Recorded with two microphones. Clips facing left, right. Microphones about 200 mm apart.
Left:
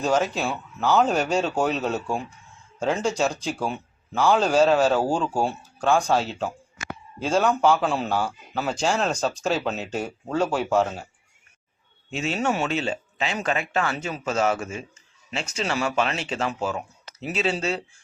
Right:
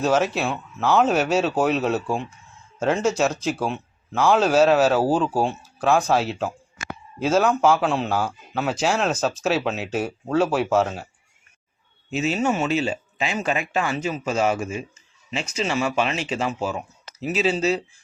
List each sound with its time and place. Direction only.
0.0 s a man's voice: 5° right (ahead or behind)
12.1 s speech: 5° right (ahead or behind)